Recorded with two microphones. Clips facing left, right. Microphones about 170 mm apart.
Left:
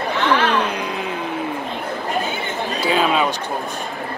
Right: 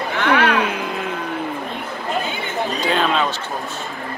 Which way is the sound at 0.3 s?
60° right (ahead or behind).